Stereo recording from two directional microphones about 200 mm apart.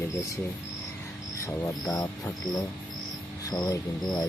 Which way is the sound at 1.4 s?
15° left (ahead or behind).